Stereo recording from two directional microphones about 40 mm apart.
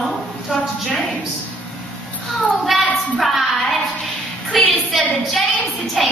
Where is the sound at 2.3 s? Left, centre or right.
Centre.